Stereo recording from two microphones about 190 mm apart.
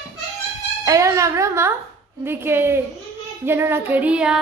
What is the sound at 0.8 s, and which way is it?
Child singing, 15° right (ahead or behind).